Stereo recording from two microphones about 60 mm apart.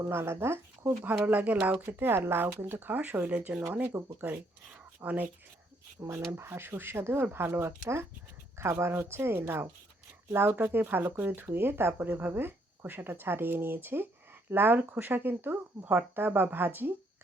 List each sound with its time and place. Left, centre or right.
0.1 s a woman's voice: right
1.2 s speech: right
1.9 s speech: right
5.0 s speech: right
6.0 s speech: right
6.3 s a woman's voice: right